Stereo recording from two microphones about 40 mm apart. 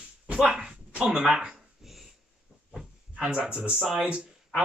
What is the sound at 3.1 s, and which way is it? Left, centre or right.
Speech, right.